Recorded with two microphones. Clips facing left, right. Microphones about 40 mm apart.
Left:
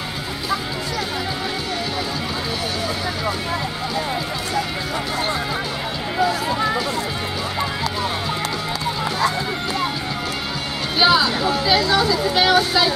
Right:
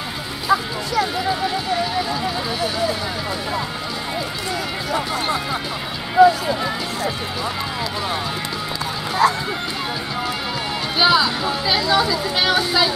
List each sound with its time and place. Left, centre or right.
4.6 s music: centre
6.1 s a sound: centre
9.2 s run: centre
11.0 s speech: centre